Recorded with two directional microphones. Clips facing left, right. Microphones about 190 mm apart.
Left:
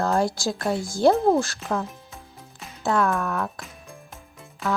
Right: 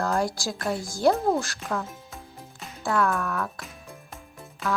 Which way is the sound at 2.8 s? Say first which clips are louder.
Left 2 dB; 20° left (ahead or behind).